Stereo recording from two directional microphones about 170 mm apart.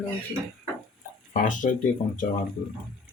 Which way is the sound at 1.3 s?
50° left (ahead or behind).